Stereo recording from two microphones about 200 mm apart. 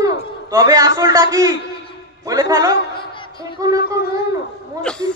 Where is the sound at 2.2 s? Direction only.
20° right (ahead or behind).